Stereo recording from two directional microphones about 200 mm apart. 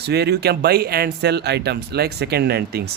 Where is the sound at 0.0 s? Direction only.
55° right (ahead or behind).